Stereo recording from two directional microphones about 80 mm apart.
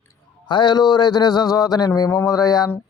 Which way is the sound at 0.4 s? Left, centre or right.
Left.